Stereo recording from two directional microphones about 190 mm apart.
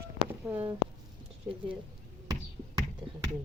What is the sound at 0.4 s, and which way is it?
Speech, 5° right (ahead or behind).